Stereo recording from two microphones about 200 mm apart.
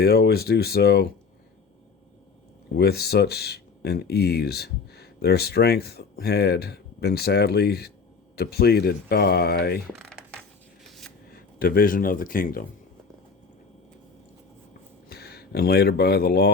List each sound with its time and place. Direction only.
0.0 s speech: 50° left (ahead or behind)
2.7 s speech: 55° left (ahead or behind)
10.0 s a sound: 5° left (ahead or behind)
11.3 s speech: 50° left (ahead or behind)
15.1 s speech: 50° left (ahead or behind)